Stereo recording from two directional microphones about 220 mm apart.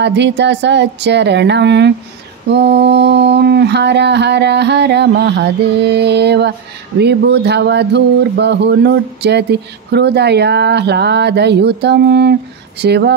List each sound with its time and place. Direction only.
0.0 s speech: 50° right (ahead or behind)